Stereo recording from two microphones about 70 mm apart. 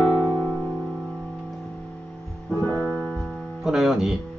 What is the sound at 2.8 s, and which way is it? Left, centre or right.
Piano, centre.